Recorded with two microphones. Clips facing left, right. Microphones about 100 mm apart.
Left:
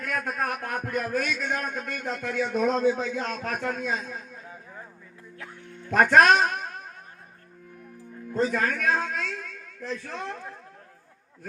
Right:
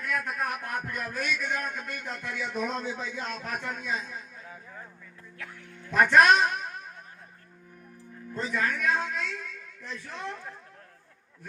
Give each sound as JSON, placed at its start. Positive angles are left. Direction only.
{"t": 0.1, "sound": "a man's voice", "side_deg": 40}
{"t": 4.4, "sound": "a sound", "side_deg": 25}
{"t": 5.4, "sound": "music", "side_deg": 25}
{"t": 5.9, "sound": "a woman's voice", "side_deg": 50}
{"t": 8.4, "sound": "a man's voice", "side_deg": 40}